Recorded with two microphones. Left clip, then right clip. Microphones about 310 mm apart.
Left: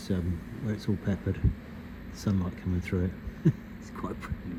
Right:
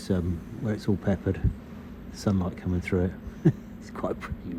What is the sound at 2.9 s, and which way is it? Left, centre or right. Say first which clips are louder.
Speech: right 6 dB; right.